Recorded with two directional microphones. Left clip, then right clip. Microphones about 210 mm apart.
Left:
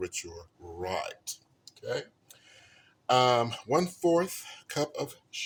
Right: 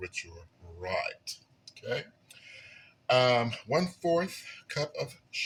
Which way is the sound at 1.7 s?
50° left (ahead or behind).